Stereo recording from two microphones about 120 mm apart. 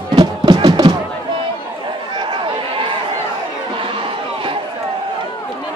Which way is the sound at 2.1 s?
45° right (ahead or behind).